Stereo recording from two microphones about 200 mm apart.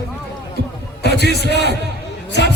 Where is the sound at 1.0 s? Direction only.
55° left (ahead or behind).